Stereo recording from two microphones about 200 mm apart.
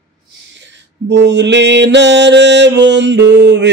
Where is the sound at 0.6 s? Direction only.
60° right (ahead or behind).